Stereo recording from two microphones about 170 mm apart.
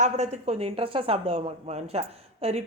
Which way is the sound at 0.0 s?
40° right (ahead or behind).